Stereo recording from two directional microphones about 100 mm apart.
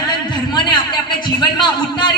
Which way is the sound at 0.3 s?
50° left (ahead or behind).